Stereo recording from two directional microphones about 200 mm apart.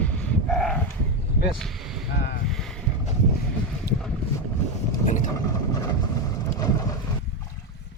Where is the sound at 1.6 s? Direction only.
Centre (ahead or behind).